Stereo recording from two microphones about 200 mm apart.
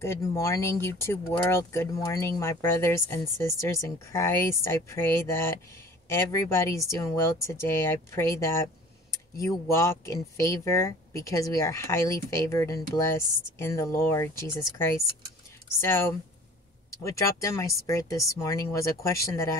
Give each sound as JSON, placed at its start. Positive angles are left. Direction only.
{"t": 0.0, "sound": "speech", "side_deg": 15}